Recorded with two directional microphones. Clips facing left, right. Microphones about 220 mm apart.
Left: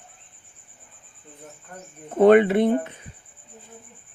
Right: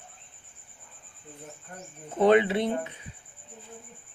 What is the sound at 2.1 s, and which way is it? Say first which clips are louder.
Speech: left 6 dB; 55° left (ahead or behind).